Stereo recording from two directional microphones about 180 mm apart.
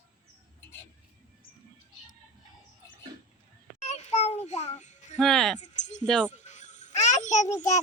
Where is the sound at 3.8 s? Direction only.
40° left (ahead or behind).